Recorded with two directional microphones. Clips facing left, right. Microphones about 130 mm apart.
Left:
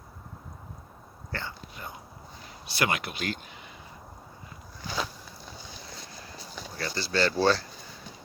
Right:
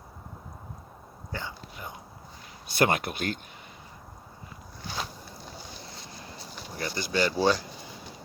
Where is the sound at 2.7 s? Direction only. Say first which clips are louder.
Right 4 dB; 45° right (ahead or behind).